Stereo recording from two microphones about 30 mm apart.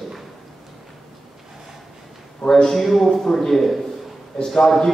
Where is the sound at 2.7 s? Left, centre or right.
Centre.